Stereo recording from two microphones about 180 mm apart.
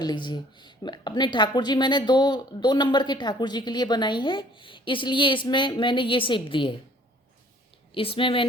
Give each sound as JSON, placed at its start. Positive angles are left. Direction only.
{"t": 0.0, "sound": "a woman's voice", "side_deg": 25}
{"t": 7.9, "sound": "a woman's voice", "side_deg": 30}